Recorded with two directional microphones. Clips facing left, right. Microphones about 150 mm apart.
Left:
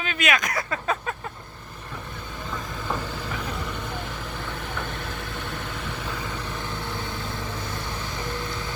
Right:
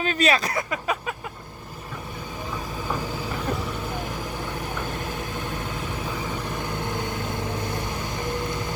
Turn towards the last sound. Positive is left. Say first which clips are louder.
# right 4 dB
turn(degrees=-15)  # may be behind; listen again after turning